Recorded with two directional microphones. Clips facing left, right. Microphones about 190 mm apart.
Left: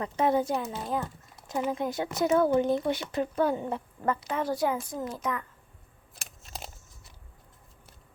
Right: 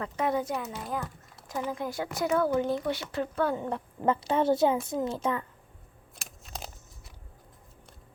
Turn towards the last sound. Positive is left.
turn(degrees=0)  # may be behind; listen again after turning